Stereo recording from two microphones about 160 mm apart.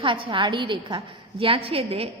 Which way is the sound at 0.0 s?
30° right (ahead or behind).